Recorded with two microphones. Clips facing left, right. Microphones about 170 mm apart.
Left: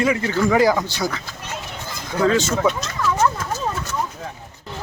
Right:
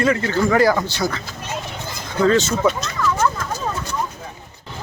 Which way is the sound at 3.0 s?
15° left (ahead or behind).